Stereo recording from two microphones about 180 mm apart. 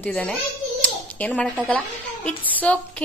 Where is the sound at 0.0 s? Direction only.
5° left (ahead or behind).